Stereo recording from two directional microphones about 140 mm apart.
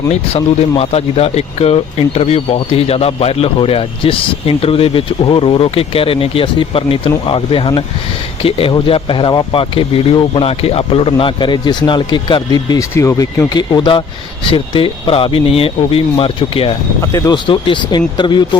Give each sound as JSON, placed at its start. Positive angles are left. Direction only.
{"t": 0.1, "sound": "speech", "side_deg": 45}
{"t": 17.0, "sound": "speech", "side_deg": 25}